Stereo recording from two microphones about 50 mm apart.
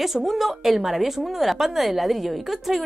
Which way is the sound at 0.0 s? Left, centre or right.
Centre.